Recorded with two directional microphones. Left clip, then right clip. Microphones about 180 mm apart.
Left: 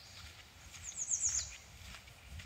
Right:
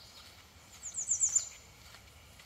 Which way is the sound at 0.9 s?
20° right (ahead or behind).